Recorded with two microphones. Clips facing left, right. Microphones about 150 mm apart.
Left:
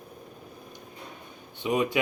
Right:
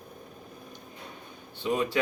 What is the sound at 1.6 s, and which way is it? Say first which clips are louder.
Speech: left 2 dB; 10° left (ahead or behind).